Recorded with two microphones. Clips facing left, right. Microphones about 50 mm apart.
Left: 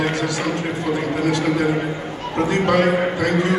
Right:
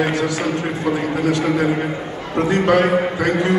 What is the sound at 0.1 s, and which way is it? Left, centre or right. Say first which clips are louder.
A man's voice: right 2 dB; right.